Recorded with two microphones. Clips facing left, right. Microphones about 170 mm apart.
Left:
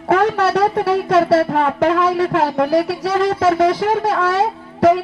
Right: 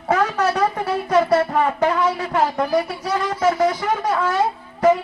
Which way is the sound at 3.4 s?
85° left.